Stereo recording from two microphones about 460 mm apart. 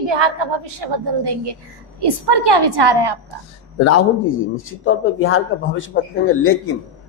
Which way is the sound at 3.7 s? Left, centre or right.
Left.